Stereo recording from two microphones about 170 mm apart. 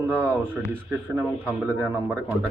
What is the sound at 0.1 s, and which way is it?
Speech, 10° right (ahead or behind).